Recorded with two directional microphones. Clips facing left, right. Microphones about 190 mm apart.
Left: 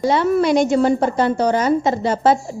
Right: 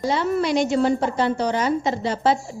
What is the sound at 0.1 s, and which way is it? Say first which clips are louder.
A woman's voice: left 5 dB; 55° left (ahead or behind).